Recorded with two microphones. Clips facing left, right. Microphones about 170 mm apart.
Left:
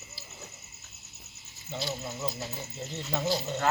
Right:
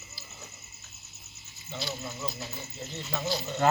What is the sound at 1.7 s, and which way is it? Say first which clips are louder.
Speech: left 2 dB; 45° left (ahead or behind).